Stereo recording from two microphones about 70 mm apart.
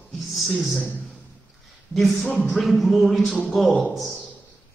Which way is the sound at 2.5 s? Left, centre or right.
Centre.